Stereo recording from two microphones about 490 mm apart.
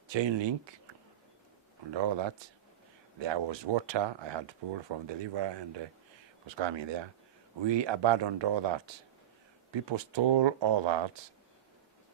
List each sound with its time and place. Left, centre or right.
0.1 s speech: right
1.9 s speech: right